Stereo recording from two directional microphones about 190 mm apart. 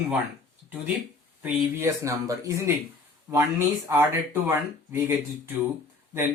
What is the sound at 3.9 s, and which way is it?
Speech, 15° right (ahead or behind).